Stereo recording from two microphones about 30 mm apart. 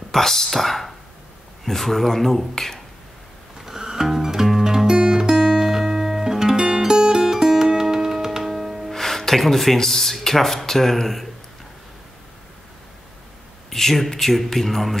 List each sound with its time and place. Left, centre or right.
0.1 s speech: centre
3.6 s music: centre
8.9 s music: centre
9.8 s speech: centre
13.7 s speech: centre